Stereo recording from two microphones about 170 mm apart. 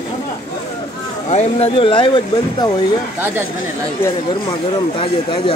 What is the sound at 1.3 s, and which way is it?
Speech, 35° left (ahead or behind).